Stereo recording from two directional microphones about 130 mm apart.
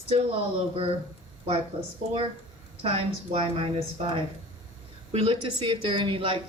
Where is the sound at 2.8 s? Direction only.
45° right (ahead or behind).